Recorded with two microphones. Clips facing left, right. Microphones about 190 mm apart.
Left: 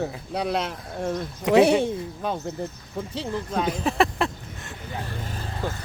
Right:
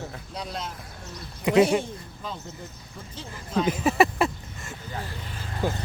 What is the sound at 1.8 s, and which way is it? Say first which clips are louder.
Speech: left 9 dB; 60° left (ahead or behind).